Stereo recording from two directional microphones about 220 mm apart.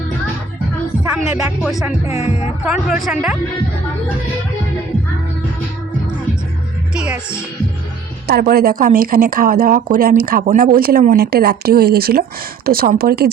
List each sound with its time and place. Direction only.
1.3 s speech: 5° right (ahead or behind)
2.0 s a woman's voice: 30° left (ahead or behind)
2.6 s speech: 5° right (ahead or behind)
6.9 s speech: 5° right (ahead or behind)
8.3 s speech: 45° right (ahead or behind)